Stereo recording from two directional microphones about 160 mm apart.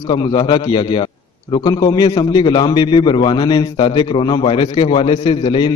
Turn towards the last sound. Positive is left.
turn(degrees=30)  # may be behind; listen again after turning